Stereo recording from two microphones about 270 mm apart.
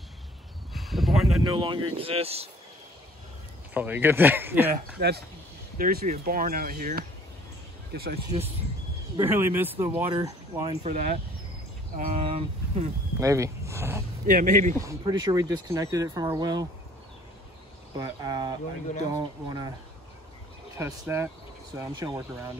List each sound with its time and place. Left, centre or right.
0.7 s a sound: centre
1.5 s speech: centre
3.7 s speech: centre
5.0 s speech: right
9.1 s speech: centre
10.8 s speech: right
13.2 s speech: centre
14.2 s speech: right
14.8 s speech: centre
17.9 s speech: centre
20.7 s speech: centre